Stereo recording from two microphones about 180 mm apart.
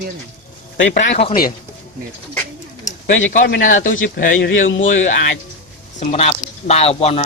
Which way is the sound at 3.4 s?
55° left (ahead or behind).